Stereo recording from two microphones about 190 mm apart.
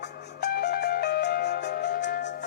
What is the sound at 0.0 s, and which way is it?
Music, 60° left (ahead or behind).